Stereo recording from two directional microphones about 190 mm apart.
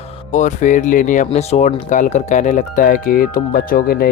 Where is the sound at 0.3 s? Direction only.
40° left (ahead or behind).